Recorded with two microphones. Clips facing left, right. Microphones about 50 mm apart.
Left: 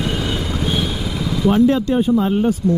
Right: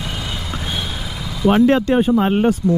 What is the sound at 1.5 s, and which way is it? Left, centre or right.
Speech, right.